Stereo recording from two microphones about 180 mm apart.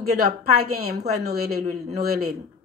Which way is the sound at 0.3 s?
55° right (ahead or behind).